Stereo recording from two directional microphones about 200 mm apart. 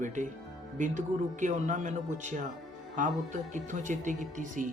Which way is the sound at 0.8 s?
40° right (ahead or behind).